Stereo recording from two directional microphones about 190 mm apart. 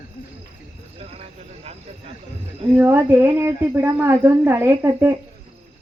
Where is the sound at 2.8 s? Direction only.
10° right (ahead or behind).